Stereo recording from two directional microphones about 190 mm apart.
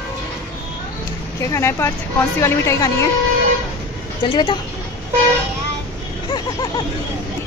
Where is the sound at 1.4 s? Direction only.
15° left (ahead or behind).